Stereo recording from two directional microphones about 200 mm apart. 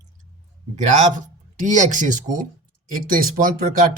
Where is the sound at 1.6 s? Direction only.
40° right (ahead or behind).